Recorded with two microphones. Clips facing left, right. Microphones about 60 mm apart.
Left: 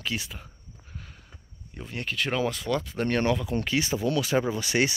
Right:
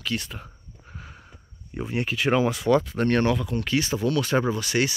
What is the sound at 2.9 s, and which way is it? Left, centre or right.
Speech, centre.